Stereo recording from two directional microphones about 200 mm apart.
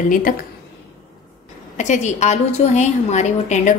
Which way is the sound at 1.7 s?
35° left (ahead or behind).